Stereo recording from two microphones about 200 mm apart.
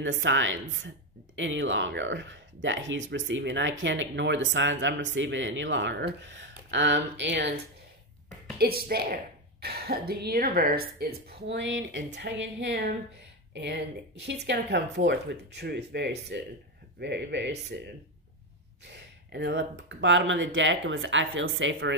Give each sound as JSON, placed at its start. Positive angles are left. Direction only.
{"t": 0.0, "sound": "a woman's voice", "side_deg": -70}
{"t": 8.5, "sound": "a woman's voice", "side_deg": -50}
{"t": 18.9, "sound": "speech", "side_deg": -60}